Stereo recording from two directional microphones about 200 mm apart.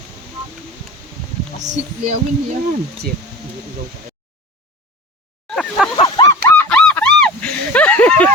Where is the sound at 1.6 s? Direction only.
35° right (ahead or behind).